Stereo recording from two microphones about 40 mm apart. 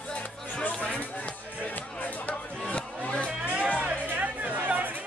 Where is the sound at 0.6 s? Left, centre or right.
Left.